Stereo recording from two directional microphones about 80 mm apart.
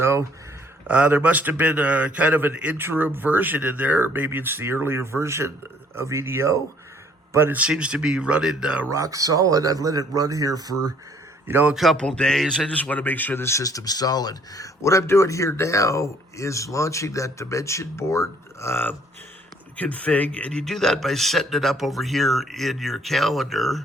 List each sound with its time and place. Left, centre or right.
0.0 s a sound: right
0.9 s a man's voice: centre
7.7 s speech: centre
8.9 s speech: right
11.4 s a man's voice: right
11.7 s a man's voice: centre; by 13.7 s left
13.7 s speech: left
19.7 s a man's voice: centre